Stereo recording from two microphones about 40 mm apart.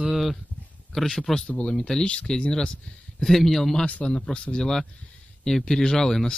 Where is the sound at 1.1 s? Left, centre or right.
Centre.